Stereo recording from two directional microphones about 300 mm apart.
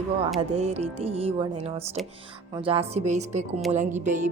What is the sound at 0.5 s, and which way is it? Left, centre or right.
Speech, right.